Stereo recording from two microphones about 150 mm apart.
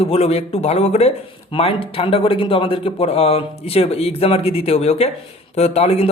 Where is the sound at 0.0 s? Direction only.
40° left (ahead or behind).